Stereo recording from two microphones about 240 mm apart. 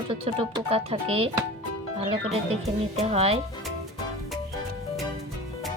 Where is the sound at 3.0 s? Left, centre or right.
Right.